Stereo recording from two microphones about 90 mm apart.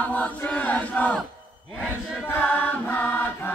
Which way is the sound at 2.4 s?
20° left (ahead or behind).